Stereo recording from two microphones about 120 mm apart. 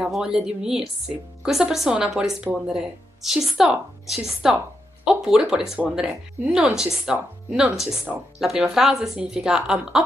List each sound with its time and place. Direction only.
0.0 s a woman's voice: 5° right (ahead or behind)